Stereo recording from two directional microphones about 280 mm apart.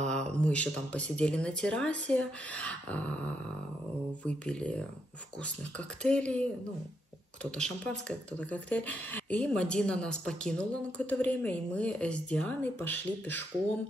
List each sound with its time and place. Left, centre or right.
0.0 s speech: centre
7.5 s speech: centre